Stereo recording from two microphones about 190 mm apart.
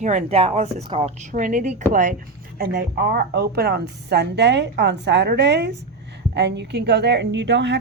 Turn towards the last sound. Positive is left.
turn(degrees=-65)  # may be behind; listen again after turning